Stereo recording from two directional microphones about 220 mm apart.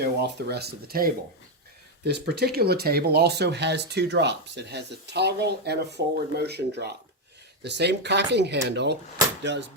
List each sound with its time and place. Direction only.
0.0 s speech: 45° right (ahead or behind)